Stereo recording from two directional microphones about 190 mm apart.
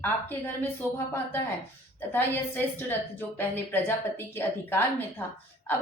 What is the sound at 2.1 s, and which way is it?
A woman's voice, 10° left (ahead or behind).